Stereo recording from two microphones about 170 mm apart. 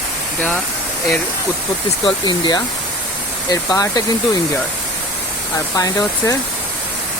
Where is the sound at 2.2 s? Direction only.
25° left (ahead or behind).